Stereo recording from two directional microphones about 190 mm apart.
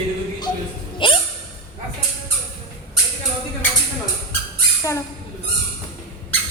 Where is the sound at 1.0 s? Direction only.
25° left (ahead or behind).